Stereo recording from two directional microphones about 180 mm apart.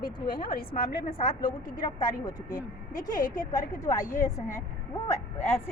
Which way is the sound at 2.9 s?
45° left (ahead or behind).